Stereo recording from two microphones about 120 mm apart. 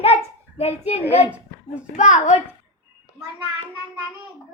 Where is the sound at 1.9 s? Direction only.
85° left.